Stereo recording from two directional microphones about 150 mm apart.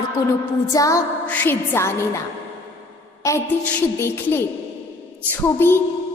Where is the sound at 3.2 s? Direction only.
15° left (ahead or behind).